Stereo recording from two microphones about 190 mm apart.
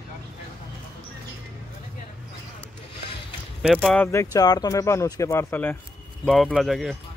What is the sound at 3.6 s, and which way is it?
Speech, centre (ahead or behind).